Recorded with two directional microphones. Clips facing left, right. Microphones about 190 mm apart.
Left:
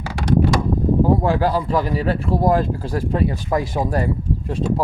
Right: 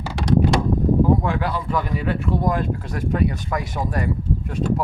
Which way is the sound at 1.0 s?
35° left (ahead or behind).